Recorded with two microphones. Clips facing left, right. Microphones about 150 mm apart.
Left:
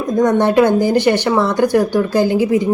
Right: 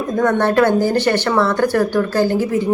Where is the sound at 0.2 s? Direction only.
15° left (ahead or behind).